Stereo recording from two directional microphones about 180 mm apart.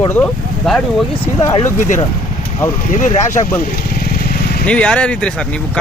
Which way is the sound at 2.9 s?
45° left (ahead or behind).